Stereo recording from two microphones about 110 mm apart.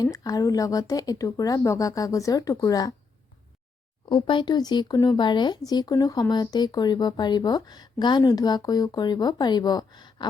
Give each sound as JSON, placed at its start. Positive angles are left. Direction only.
{"t": 0.0, "sound": "speech", "side_deg": 35}
{"t": 4.1, "sound": "speech", "side_deg": 50}